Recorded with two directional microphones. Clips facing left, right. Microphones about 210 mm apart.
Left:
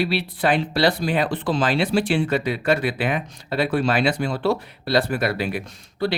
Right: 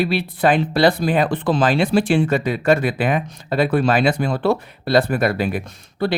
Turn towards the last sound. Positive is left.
turn(degrees=-55)  # may be behind; listen again after turning